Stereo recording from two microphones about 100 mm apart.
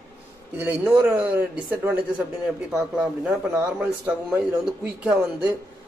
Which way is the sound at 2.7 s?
5° right (ahead or behind).